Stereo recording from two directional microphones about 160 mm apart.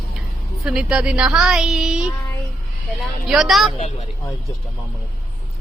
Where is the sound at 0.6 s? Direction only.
5° right (ahead or behind).